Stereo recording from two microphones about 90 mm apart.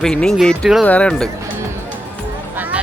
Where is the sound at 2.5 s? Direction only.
20° right (ahead or behind).